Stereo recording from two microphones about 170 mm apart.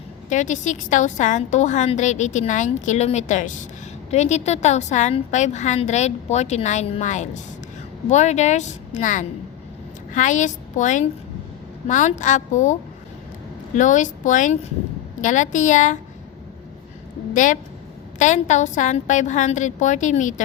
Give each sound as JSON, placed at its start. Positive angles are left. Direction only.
{"t": 0.3, "sound": "a woman's voice", "side_deg": 45}
{"t": 13.7, "sound": "a woman's voice", "side_deg": 50}
{"t": 17.3, "sound": "a woman's voice", "side_deg": 50}